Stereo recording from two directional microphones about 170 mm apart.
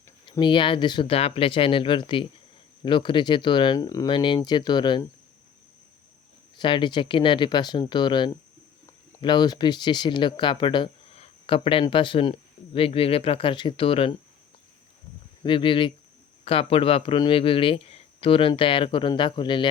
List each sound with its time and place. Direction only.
0.3 s speech: 25° left (ahead or behind)
6.6 s speech: 30° left (ahead or behind)
15.4 s speech: 30° left (ahead or behind)